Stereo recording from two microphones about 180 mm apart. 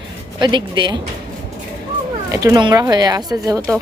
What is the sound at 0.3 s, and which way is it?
Speech, 25° right (ahead or behind).